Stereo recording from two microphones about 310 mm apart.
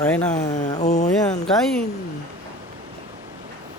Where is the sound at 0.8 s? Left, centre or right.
Left.